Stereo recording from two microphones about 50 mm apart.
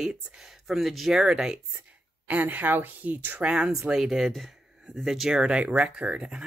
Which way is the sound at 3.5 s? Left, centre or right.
Centre.